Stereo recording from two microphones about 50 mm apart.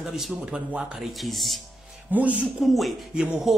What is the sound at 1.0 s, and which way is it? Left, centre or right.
Speech, centre.